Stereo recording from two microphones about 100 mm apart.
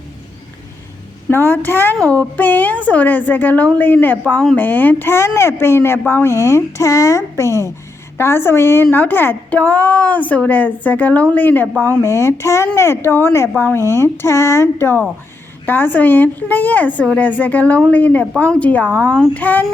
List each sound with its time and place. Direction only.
1.3 s a woman's voice: 20° left (ahead or behind)